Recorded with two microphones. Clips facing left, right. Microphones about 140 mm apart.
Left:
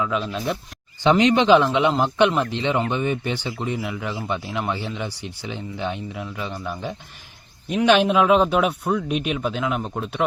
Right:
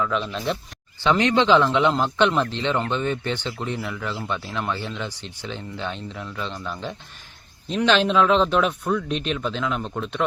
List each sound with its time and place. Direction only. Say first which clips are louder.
0.0 s speech: left 1 dB; 5° left (ahead or behind)